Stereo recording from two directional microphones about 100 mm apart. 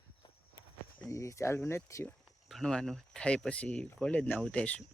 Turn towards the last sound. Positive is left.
turn(degrees=10)  # may be behind; listen again after turning